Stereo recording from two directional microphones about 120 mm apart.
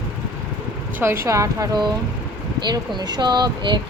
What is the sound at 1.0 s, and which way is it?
Speech, 20° right (ahead or behind).